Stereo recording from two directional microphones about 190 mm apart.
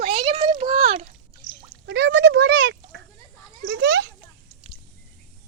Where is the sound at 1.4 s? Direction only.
80° left.